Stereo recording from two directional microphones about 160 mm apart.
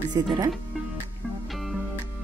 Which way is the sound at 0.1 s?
25° right (ahead or behind).